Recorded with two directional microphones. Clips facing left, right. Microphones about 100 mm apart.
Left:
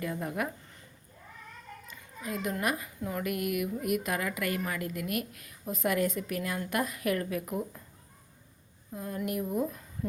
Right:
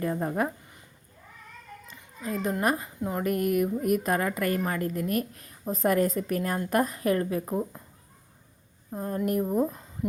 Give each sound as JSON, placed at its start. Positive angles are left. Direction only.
{"t": 0.0, "sound": "speech", "side_deg": -35}
{"t": 2.2, "sound": "speech", "side_deg": -35}
{"t": 3.2, "sound": "speech", "side_deg": -40}
{"t": 8.9, "sound": "speech", "side_deg": -40}